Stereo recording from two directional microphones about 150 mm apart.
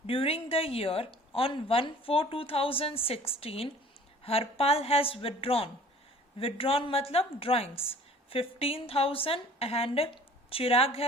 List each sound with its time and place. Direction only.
0.1 s a woman's voice: 40° left (ahead or behind)